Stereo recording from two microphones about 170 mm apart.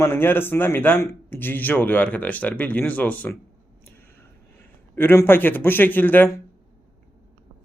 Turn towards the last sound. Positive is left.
turn(degrees=10)  # may be behind; listen again after turning